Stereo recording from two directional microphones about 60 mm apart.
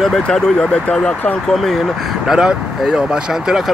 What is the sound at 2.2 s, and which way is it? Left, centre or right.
Speech, centre.